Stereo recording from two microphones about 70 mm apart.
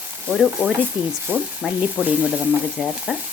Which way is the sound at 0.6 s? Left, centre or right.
Centre.